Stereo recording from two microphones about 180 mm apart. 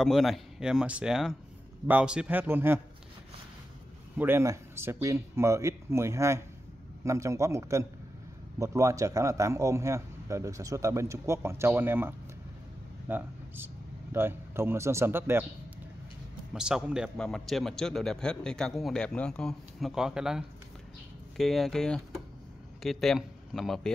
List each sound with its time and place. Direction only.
0.0 s a man's voice: centre (ahead or behind)
4.2 s a man's voice: 15° right (ahead or behind)
16.5 s a man's voice: 5° right (ahead or behind)